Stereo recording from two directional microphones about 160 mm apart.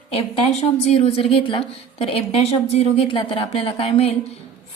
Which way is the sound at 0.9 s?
40° left (ahead or behind).